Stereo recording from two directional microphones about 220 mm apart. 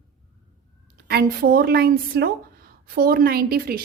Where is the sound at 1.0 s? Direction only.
45° right (ahead or behind).